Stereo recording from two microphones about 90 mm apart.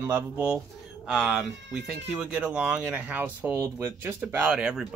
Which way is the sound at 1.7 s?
10° right (ahead or behind).